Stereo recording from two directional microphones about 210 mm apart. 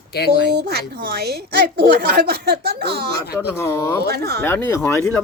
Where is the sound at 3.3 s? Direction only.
10° left (ahead or behind).